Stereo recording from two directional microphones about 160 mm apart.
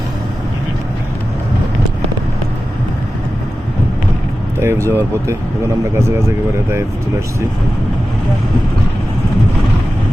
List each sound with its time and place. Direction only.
4.6 s speech: 15° right (ahead or behind)